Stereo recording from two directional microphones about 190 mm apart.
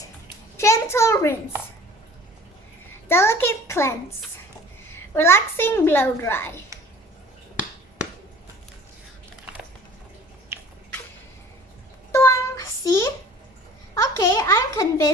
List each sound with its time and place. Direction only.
0.5 s a sound: 15° left (ahead or behind)
3.1 s a child's voice: 10° left (ahead or behind)
12.1 s child singing: 15° left (ahead or behind)
13.9 s a child's voice: 15° left (ahead or behind)